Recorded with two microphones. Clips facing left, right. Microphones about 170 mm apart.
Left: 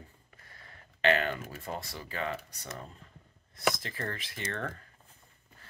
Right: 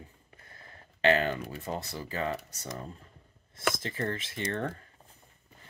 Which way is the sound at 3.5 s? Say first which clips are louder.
Even; 25° right (ahead or behind).